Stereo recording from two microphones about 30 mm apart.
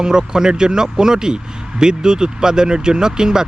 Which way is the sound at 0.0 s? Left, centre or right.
Right.